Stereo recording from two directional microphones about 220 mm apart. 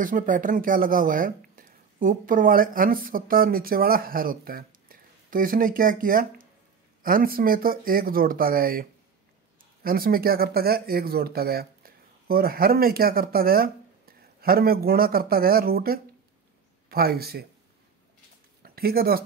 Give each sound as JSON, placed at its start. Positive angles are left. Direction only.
{"t": 0.0, "sound": "speech", "side_deg": -35}
{"t": 9.8, "sound": "speech", "side_deg": -40}
{"t": 18.6, "sound": "speech", "side_deg": -45}